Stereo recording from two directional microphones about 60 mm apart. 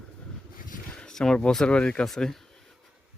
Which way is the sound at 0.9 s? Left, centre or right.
Centre.